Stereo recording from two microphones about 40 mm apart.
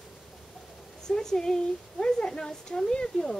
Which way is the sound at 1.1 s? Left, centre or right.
Centre.